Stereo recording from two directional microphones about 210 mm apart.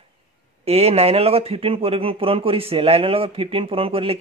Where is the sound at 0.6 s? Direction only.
30° right (ahead or behind).